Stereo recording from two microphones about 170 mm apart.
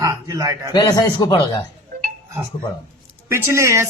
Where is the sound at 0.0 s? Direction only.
20° right (ahead or behind).